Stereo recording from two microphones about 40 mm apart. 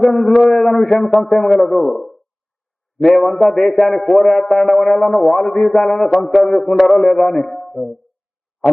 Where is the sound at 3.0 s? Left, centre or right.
Left.